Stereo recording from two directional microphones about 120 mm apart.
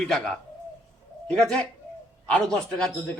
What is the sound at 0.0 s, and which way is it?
Speech, 5° left (ahead or behind).